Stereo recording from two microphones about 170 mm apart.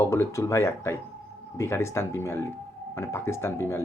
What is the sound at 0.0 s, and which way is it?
Speech, 15° left (ahead or behind).